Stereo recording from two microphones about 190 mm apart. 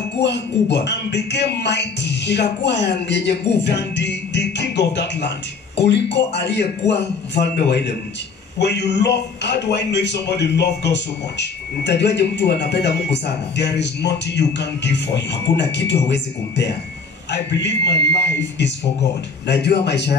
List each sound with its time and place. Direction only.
0.2 s a man's voice: 65° left (ahead or behind)